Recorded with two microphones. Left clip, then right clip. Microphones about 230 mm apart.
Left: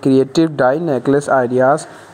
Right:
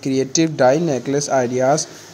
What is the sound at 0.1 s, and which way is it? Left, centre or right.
Speech, centre.